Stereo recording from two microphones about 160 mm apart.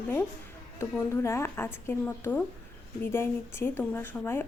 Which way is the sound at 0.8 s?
15° left (ahead or behind).